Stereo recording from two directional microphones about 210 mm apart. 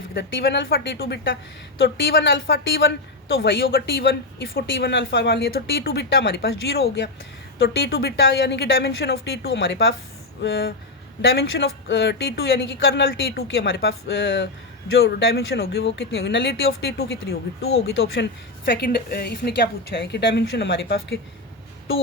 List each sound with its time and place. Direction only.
0.1 s a woman's voice: 50° left (ahead or behind)
1.8 s a woman's voice: 60° left (ahead or behind)
7.6 s a woman's voice: 50° left (ahead or behind)
13.1 s a woman's voice: 45° left (ahead or behind)
13.6 s a woman's voice: 55° left (ahead or behind)
17.7 s speech: 70° left (ahead or behind)
18.6 s a woman's voice: 50° left (ahead or behind)